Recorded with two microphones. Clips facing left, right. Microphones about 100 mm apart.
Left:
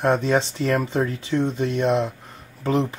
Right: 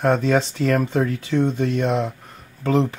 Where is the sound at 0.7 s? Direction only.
Centre (ahead or behind).